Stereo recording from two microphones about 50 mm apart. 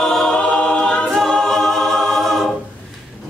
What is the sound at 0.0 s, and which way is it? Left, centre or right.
Choir, centre.